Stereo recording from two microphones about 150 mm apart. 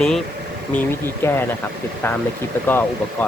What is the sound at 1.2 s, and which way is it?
Speech, 15° left (ahead or behind).